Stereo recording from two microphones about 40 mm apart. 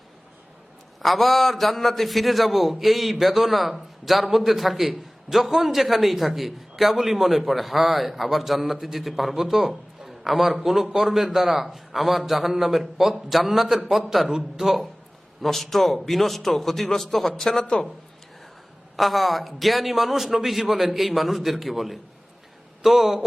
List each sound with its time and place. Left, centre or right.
1.0 s a man's voice: centre
14.6 s a man's voice: centre
15.4 s a man's voice: centre
18.9 s a man's voice: centre